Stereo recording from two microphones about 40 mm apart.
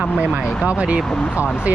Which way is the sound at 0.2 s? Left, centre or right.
Right.